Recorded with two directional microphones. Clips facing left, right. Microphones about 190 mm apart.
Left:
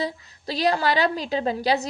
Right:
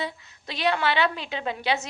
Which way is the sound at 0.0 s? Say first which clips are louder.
Left 4 dB; 35° left (ahead or behind).